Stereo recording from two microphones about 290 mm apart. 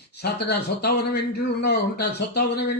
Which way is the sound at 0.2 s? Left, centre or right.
Left.